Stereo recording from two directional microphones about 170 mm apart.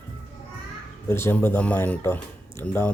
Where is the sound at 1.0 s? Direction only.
15° left (ahead or behind).